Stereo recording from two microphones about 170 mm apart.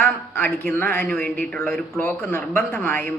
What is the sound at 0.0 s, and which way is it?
A man's voice, 10° left (ahead or behind).